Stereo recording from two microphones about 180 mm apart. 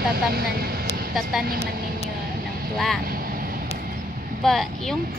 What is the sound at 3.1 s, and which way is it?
Vehicle, 55° right (ahead or behind).